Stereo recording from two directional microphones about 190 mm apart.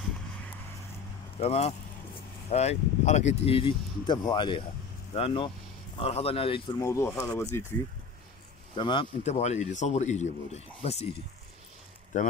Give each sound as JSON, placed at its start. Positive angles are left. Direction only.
{"t": 1.4, "sound": "speech", "side_deg": 30}
{"t": 6.8, "sound": "speech", "side_deg": 15}
{"t": 8.7, "sound": "speech", "side_deg": 25}
{"t": 12.1, "sound": "speech", "side_deg": 40}